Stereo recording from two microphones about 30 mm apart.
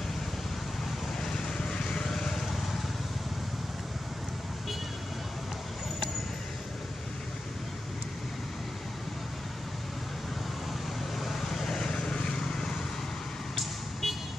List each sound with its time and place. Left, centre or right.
1.2 s vehicle: left
2.0 s vehicle: centre
11.1 s vehicle: centre
11.7 s vehicle: left
14.0 s vehicle: centre